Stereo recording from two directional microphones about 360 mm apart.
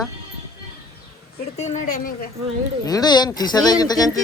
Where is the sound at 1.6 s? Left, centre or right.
Left.